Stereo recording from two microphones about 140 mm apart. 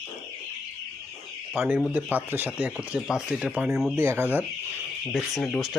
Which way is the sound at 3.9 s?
15° right (ahead or behind).